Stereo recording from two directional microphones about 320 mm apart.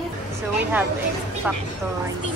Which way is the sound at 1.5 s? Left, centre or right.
Centre.